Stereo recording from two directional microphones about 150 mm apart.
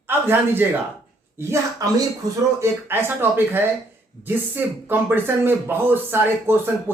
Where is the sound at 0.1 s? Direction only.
15° right (ahead or behind).